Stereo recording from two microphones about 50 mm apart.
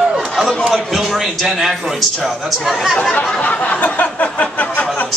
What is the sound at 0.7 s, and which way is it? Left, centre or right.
A man's voice, centre.